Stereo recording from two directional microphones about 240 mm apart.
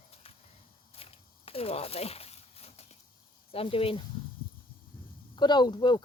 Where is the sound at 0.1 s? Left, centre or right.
Left.